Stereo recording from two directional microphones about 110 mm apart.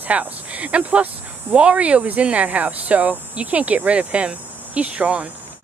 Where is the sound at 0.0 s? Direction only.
15° right (ahead or behind).